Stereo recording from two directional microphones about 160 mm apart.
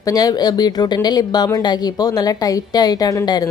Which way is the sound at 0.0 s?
25° left (ahead or behind).